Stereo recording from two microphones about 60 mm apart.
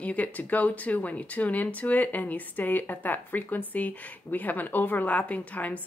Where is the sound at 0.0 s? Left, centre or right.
Left.